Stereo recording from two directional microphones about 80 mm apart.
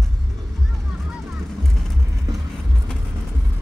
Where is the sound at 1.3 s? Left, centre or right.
Centre.